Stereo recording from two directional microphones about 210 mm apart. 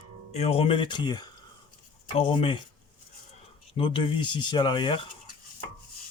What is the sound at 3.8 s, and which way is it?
Speech, 25° left (ahead or behind).